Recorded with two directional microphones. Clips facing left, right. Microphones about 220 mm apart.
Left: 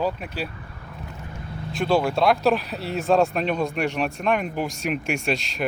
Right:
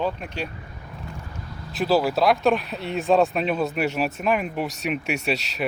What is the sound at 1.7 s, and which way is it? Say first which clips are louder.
Speech: even; 5° right (ahead or behind).